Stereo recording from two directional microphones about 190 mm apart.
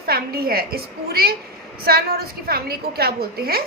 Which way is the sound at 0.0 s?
55° right (ahead or behind).